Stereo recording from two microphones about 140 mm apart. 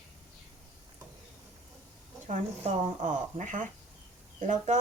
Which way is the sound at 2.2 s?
60° right (ahead or behind).